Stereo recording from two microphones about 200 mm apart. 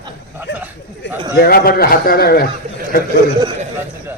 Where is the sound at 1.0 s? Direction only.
60° left (ahead or behind).